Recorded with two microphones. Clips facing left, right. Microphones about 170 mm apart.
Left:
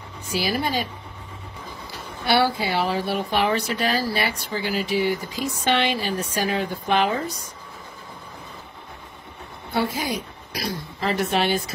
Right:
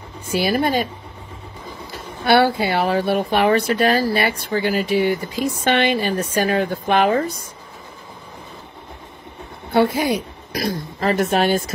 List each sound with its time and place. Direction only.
0.3 s speech: 55° right (ahead or behind)
2.2 s a woman's voice: 55° right (ahead or behind)
9.8 s speech: 60° right (ahead or behind)